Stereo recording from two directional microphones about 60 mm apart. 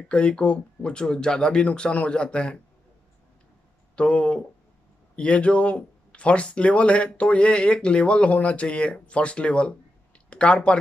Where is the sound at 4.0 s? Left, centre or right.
Centre.